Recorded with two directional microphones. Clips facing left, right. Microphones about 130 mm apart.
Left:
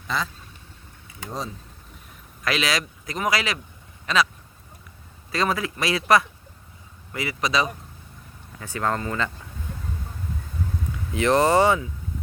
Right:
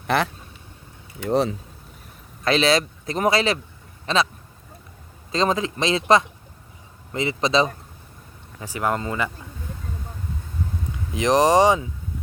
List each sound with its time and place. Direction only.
0.1 s speech: 65° right (ahead or behind)
1.3 s speech: 70° right (ahead or behind)
2.4 s speech: 30° right (ahead or behind)
5.3 s speech: 20° right (ahead or behind)
8.5 s speech: 15° right (ahead or behind)
11.1 s speech: 15° right (ahead or behind)